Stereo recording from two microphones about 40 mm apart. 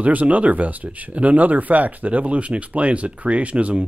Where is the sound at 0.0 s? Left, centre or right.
Right.